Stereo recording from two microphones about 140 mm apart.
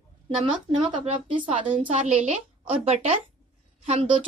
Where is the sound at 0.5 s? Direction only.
35° right (ahead or behind).